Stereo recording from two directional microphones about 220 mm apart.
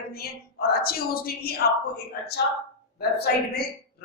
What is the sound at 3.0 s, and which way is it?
Speech, 45° left (ahead or behind).